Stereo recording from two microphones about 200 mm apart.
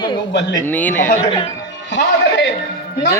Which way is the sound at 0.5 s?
10° left (ahead or behind).